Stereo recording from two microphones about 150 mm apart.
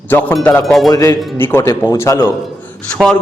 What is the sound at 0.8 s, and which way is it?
A man's voice, 25° left (ahead or behind).